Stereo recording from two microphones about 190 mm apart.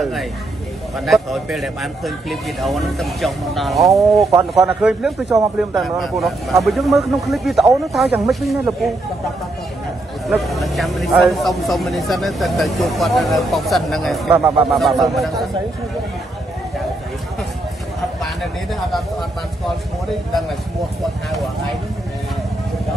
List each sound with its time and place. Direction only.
0.0 s speech: centre (ahead or behind)
4.3 s speech: 15° right (ahead or behind)
4.6 s speech: centre (ahead or behind)
10.2 s speech: centre (ahead or behind)